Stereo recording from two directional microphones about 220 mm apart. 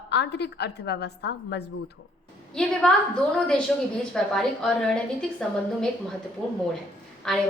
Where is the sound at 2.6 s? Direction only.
5° left (ahead or behind).